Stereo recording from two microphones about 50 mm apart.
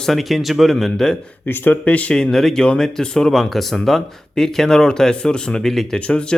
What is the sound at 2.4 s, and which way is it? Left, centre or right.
A man's voice, centre.